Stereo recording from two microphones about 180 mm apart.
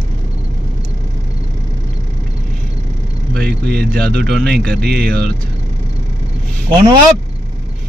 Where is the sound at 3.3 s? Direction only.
65° right (ahead or behind).